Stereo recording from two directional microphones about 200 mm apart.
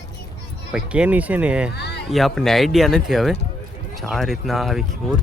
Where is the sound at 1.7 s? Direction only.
55° left (ahead or behind).